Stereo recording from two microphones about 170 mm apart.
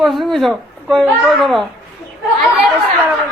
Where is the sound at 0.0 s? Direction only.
Centre (ahead or behind).